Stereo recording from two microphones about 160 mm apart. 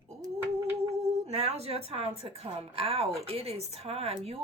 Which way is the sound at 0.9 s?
40° right (ahead or behind).